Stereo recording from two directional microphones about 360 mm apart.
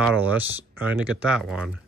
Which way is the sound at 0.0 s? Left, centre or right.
Centre.